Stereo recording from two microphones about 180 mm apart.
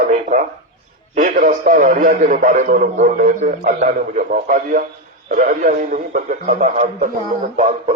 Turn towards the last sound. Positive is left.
turn(degrees=-40)  # may be behind; listen again after turning